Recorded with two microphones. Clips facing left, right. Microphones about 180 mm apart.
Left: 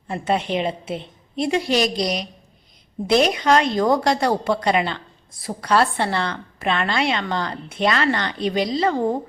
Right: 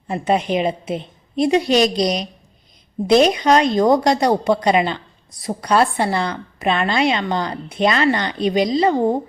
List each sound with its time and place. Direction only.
0.1 s a woman's voice: 15° right (ahead or behind)